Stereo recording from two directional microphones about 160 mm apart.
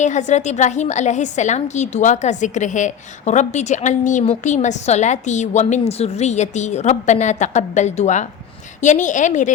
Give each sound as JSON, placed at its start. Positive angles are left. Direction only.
{"t": 0.0, "sound": "a woman's voice", "side_deg": 50}